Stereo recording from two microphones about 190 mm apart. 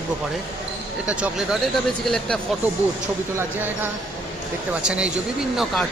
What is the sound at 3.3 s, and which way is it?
Speech, 10° right (ahead or behind).